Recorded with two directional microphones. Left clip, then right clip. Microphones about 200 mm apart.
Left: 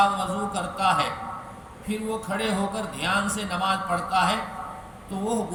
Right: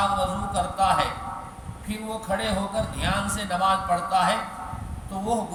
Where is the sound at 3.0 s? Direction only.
15° right (ahead or behind).